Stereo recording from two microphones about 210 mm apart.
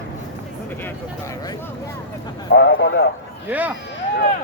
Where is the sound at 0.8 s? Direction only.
15° left (ahead or behind).